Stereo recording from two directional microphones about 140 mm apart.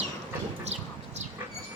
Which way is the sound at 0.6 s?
50° right (ahead or behind).